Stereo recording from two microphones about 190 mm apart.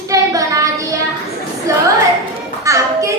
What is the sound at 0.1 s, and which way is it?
Child singing, 15° right (ahead or behind).